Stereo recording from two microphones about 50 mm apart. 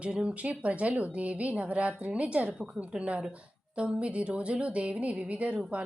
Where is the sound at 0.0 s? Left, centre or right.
Right.